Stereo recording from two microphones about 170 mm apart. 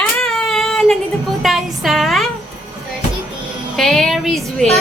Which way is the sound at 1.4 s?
Centre (ahead or behind).